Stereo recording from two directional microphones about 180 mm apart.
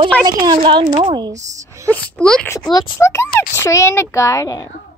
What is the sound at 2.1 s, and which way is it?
Speech, 5° left (ahead or behind).